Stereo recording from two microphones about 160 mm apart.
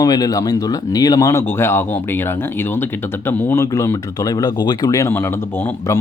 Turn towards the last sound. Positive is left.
turn(degrees=15)  # may be behind; listen again after turning